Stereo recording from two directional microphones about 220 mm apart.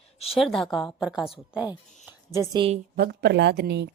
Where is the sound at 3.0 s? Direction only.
50° right (ahead or behind).